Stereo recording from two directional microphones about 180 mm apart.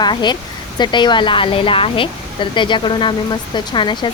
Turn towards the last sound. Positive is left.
turn(degrees=25)  # may be behind; listen again after turning